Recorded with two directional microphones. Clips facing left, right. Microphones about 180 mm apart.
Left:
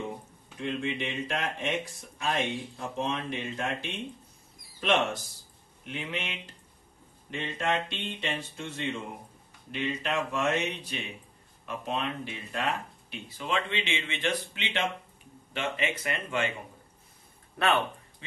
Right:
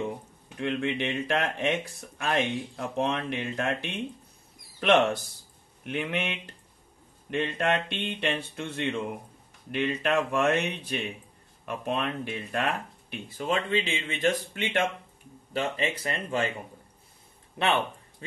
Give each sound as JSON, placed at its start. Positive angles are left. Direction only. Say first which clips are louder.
{"t": 0.6, "sound": "speech", "louder": "right 3 dB", "side_deg": -65}
{"t": 13.4, "sound": "speech", "louder": "right 4 dB", "side_deg": -45}
{"t": 15.5, "sound": "speech", "louder": "right 3 dB", "side_deg": -35}
{"t": 17.6, "sound": "speech", "louder": "even", "side_deg": -20}